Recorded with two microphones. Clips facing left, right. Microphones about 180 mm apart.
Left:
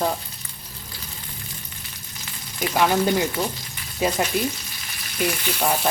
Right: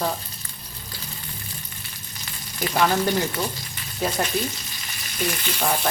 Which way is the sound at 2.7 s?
10° left (ahead or behind).